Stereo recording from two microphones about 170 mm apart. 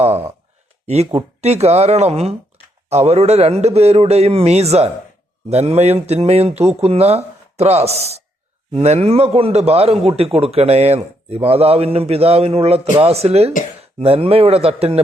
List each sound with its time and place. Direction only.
0.9 s speech: 40° right (ahead or behind)